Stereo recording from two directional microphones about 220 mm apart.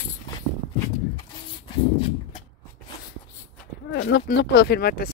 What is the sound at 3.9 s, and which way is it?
Speech, 55° left (ahead or behind).